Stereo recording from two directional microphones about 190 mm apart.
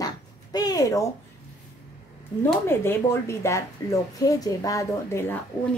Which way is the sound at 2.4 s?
10° left (ahead or behind).